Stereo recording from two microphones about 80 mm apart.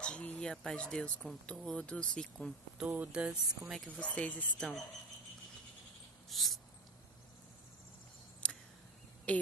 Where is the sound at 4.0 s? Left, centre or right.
Centre.